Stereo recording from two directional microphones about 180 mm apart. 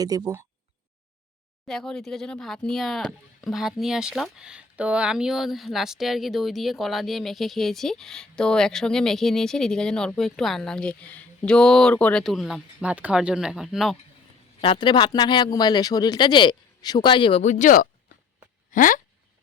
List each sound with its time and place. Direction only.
0.0 s speech: 20° right (ahead or behind)
1.6 s speech: 5° left (ahead or behind)
14.6 s speech: 30° left (ahead or behind); by 18.9 s 45° left (ahead or behind)